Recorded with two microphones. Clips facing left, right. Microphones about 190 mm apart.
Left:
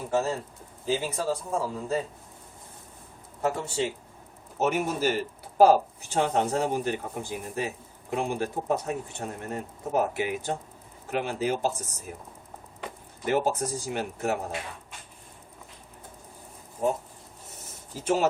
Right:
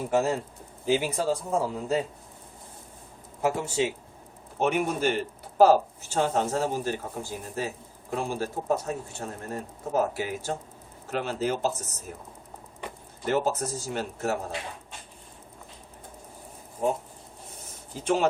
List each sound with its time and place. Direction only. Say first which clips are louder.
0.1 s speech: right 1 dB; 15° right (ahead or behind)
3.4 s speech: right 2 dB; 10° right (ahead or behind)
4.5 s speech: right 1 dB; 5° left (ahead or behind)
17.9 s speech: even; 5° left (ahead or behind)